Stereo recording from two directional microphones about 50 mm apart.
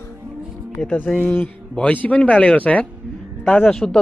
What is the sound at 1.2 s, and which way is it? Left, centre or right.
Speech, left.